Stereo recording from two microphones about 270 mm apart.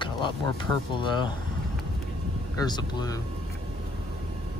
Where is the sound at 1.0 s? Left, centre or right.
Centre.